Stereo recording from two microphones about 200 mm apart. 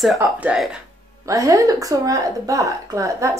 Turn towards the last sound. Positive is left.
turn(degrees=-15)  # may be behind; listen again after turning